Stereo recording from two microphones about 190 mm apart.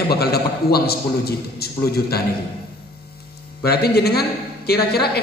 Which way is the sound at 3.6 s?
55° left (ahead or behind).